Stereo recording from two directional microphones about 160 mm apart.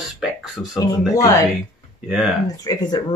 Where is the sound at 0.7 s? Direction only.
20° left (ahead or behind).